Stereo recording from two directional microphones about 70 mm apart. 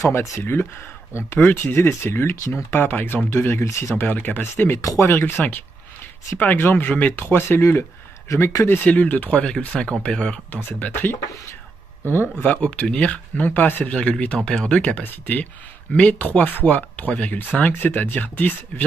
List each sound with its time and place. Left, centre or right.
0.0 s speech: left
0.4 s speech: left
3.3 s speech: left
3.9 s speech: left
4.7 s speech: left
5.0 s speech: left
8.3 s speech: left
8.6 s speech: left
10.5 s speech: left
12.5 s speech: centre
13.8 s speech: centre